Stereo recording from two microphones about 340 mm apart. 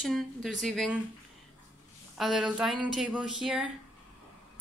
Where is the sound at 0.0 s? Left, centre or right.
Centre.